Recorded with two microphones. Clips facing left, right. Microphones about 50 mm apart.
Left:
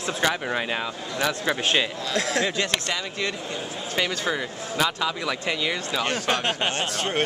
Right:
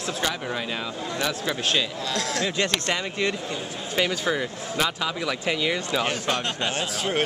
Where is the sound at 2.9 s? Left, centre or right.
Right.